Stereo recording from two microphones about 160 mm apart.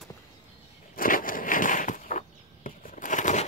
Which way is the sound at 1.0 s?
60° left (ahead or behind).